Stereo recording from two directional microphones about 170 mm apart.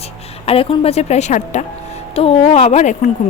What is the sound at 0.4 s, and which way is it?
A woman's voice, 35° left (ahead or behind).